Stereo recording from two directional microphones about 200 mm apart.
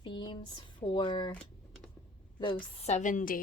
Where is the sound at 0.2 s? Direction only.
25° left (ahead or behind).